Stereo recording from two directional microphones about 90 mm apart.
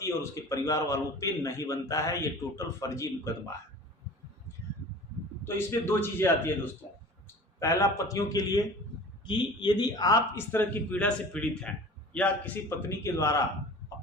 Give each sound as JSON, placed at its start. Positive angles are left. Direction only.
{"t": 0.0, "sound": "a man's voice", "side_deg": 35}
{"t": 5.5, "sound": "a man's voice", "side_deg": 25}
{"t": 7.6, "sound": "a man's voice", "side_deg": 35}
{"t": 9.2, "sound": "speech", "side_deg": 60}
{"t": 10.3, "sound": "a man's voice", "side_deg": 25}
{"t": 12.6, "sound": "a man's voice", "side_deg": 30}